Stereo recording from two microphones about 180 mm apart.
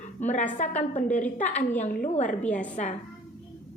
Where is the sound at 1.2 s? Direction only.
10° left (ahead or behind).